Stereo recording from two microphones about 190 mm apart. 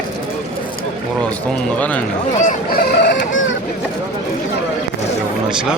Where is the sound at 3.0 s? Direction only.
75° left (ahead or behind).